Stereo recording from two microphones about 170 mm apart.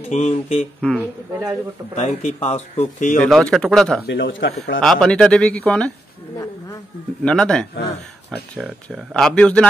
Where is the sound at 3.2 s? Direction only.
5° left (ahead or behind).